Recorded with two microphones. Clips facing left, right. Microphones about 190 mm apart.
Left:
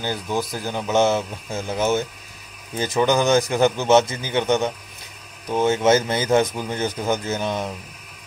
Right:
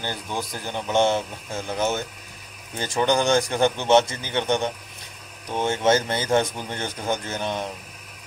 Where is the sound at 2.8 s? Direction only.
5° left (ahead or behind).